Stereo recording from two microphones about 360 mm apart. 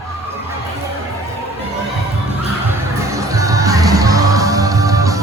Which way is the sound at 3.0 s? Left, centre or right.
Centre.